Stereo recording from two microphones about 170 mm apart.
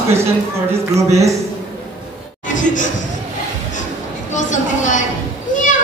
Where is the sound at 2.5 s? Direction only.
50° left (ahead or behind).